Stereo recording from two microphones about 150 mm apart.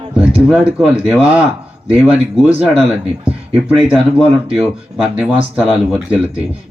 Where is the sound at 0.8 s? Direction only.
5° right (ahead or behind).